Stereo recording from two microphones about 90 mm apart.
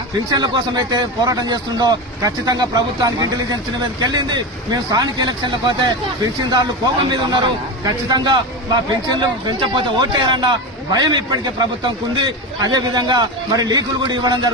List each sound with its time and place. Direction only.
0.3 s speech: 50° right (ahead or behind)